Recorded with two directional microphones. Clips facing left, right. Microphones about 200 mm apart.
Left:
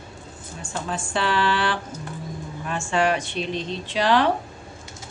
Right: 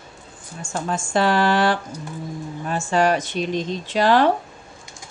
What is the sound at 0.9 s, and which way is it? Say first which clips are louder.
A woman's voice: right 5 dB; 45° right (ahead or behind).